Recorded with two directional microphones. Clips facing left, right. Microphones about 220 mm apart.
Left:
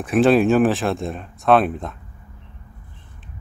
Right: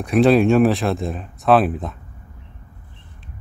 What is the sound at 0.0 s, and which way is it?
Speech, centre (ahead or behind).